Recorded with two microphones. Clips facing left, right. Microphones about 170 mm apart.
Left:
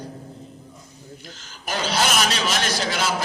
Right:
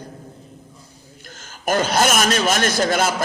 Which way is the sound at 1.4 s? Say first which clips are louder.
Right 8 dB; 50° right (ahead or behind).